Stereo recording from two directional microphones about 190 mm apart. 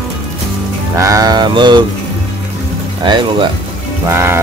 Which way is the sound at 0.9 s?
15° right (ahead or behind).